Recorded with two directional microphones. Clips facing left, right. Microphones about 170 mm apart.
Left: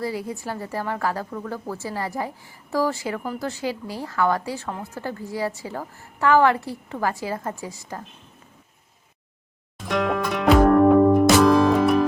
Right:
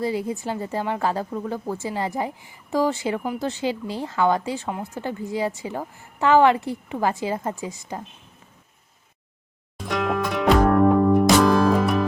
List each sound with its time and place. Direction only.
0.0 s a woman's voice: 20° right (ahead or behind)
9.7 s music: centre (ahead or behind)